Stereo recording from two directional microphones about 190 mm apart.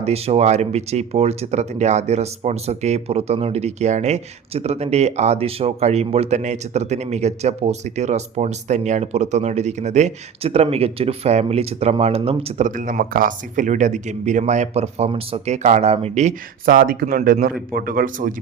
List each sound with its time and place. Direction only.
0.0 s speech: 35° right (ahead or behind)